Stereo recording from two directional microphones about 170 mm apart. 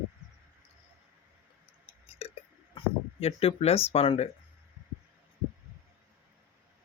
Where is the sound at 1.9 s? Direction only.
35° left (ahead or behind).